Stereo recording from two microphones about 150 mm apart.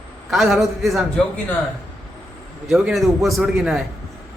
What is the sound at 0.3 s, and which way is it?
Speech, centre (ahead or behind).